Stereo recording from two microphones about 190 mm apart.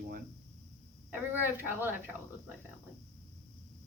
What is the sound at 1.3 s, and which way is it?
Speech, 10° right (ahead or behind).